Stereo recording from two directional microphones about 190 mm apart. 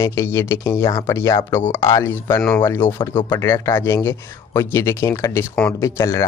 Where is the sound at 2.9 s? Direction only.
25° left (ahead or behind).